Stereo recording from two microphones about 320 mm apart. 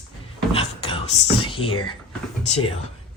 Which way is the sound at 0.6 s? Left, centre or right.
Centre.